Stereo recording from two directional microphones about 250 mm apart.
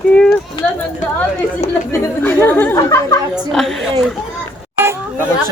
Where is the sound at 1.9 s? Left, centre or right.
Centre.